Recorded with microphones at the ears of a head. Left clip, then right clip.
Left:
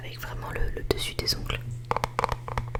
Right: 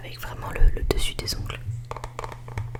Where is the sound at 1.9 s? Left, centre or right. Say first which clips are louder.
Left 8 dB; left.